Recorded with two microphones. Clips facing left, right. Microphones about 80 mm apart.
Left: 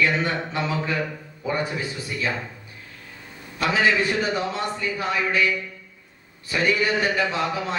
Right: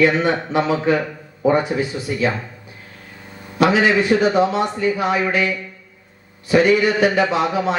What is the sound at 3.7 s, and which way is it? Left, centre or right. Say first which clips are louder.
Speech: right 3 dB; right.